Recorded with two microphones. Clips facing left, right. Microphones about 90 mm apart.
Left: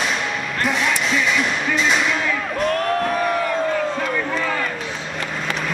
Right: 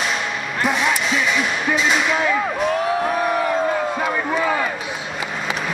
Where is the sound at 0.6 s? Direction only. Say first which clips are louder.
Right 2 dB; 5° right (ahead or behind).